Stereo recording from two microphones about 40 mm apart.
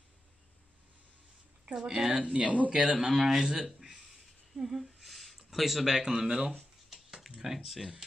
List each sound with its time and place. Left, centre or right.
1.8 s speech: centre
2.4 s speech: right
3.0 s speech: centre
4.0 s a sound: centre